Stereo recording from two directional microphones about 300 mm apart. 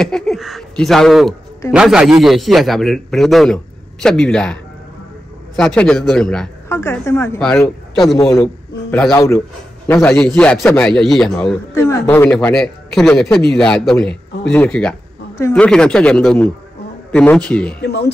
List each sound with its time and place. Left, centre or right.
0.0 s a man's voice: centre
5.6 s a man's voice: centre
17.8 s speech: left